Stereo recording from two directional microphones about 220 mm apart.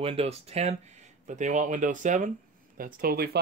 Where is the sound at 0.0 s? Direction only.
25° right (ahead or behind).